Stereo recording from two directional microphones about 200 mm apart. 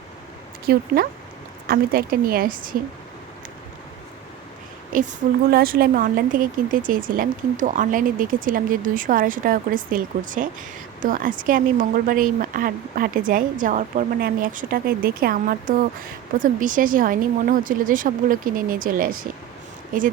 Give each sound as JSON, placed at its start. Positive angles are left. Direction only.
{"t": 0.6, "sound": "speech", "side_deg": -50}
{"t": 4.9, "sound": "a woman's voice", "side_deg": -40}